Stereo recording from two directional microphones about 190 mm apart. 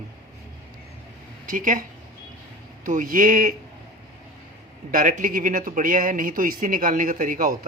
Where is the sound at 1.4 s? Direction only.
45° right (ahead or behind).